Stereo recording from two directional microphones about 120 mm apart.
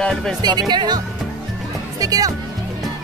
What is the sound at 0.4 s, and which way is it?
Speech, 35° right (ahead or behind).